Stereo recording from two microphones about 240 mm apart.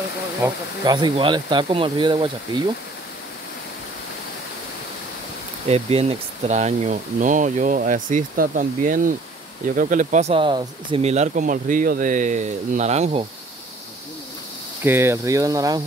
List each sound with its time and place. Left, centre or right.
0.4 s speech: centre
5.7 s speech: right
14.8 s speech: centre